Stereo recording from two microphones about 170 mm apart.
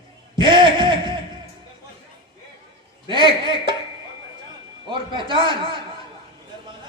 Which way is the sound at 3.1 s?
30° right (ahead or behind).